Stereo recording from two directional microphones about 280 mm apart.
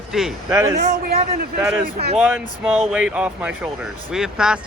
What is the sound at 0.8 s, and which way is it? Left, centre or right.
Speech, right.